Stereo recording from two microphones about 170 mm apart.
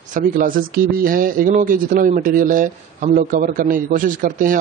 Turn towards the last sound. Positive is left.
turn(degrees=-55)  # may be behind; listen again after turning